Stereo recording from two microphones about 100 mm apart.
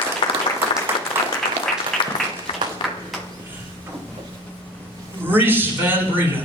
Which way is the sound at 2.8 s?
55° left (ahead or behind).